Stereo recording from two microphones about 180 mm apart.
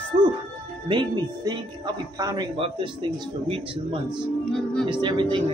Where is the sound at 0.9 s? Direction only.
25° right (ahead or behind).